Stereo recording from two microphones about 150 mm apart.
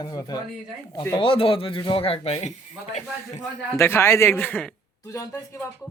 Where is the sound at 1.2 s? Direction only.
35° left (ahead or behind).